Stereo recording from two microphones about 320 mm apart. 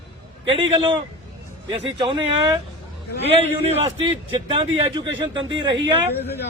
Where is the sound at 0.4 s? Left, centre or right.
Centre.